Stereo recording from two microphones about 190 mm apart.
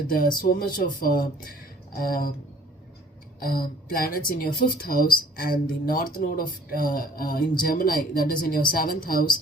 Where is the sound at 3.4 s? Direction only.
50° left (ahead or behind).